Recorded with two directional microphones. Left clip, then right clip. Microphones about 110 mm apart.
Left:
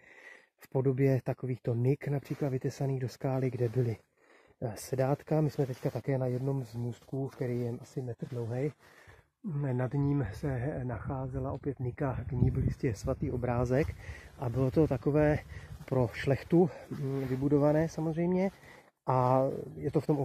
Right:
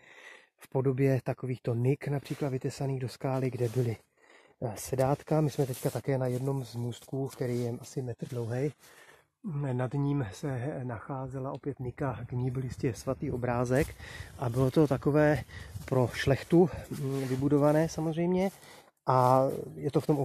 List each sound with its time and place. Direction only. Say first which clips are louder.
0.7 s speech: right 1 dB; 15° right (ahead or behind)
2.6 s speech: even; centre (ahead or behind); by 7.7 s 20° right (ahead or behind)
8.0 s speech: right 1 dB; 35° right (ahead or behind)
9.6 s speech: right 1 dB; 5° right (ahead or behind)
12.5 s speech: right 3 dB; 25° right (ahead or behind)
13.0 s speech: right 1 dB; 10° right (ahead or behind)
13.4 s speech: right 2 dB; 25° right (ahead or behind)
14.0 s speech: right 3 dB; 45° right (ahead or behind)
17.1 s speech: right 2 dB; 60° right (ahead or behind)
17.5 s speech: right 2 dB; 30° right (ahead or behind)